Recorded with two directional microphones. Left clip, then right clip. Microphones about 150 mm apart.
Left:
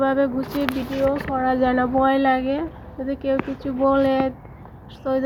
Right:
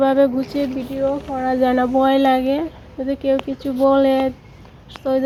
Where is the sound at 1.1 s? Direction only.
20° right (ahead or behind).